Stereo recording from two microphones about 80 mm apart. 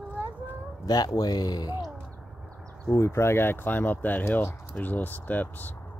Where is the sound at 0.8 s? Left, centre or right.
Left.